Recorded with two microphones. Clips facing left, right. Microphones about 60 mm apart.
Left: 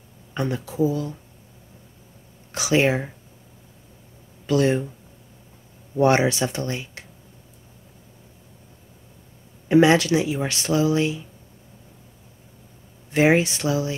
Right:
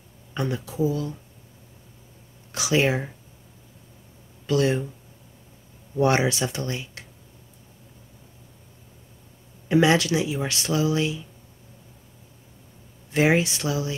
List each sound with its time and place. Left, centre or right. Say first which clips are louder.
0.3 s speech: left 2 dB; left
2.5 s speech: left 2 dB; left
4.5 s speech: left 2 dB; left
5.9 s speech: left 3 dB; left
9.7 s speech: left 3 dB; left
13.1 s speech: left 3 dB; left